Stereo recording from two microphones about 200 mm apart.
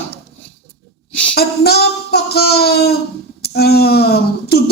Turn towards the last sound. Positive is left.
turn(degrees=50)  # may be behind; listen again after turning